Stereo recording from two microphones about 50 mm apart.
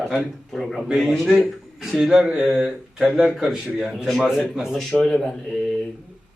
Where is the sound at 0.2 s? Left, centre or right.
Centre.